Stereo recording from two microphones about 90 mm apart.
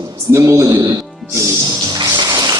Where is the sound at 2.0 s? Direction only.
50° right (ahead or behind).